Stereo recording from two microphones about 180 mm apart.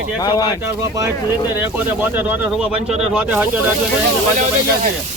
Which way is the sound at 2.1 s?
5° right (ahead or behind).